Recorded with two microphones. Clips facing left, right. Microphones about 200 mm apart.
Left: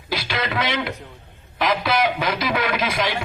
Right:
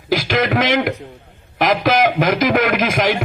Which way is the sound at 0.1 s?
45° right (ahead or behind).